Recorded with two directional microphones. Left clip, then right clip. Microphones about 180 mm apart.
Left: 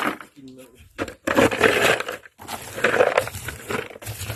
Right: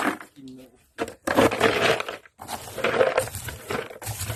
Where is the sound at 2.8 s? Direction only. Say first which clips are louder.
Left 3 dB; 25° left (ahead or behind).